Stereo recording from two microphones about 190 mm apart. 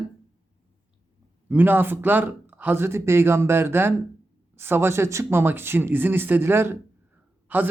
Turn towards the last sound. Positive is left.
turn(degrees=-10)  # may be behind; listen again after turning